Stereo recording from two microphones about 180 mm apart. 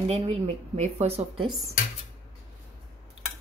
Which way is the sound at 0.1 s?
40° right (ahead or behind).